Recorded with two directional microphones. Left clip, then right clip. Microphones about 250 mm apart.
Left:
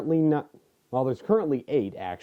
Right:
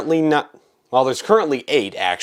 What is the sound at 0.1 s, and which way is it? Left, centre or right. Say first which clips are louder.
Speech: right 7 dB; centre.